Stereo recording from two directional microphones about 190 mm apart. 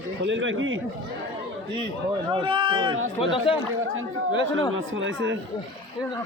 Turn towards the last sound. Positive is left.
turn(degrees=-80)